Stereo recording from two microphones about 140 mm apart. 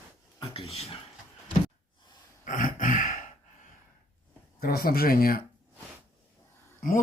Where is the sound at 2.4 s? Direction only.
70° left (ahead or behind).